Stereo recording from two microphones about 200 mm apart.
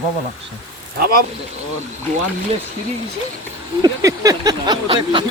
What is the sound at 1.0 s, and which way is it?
Speech, 50° right (ahead or behind).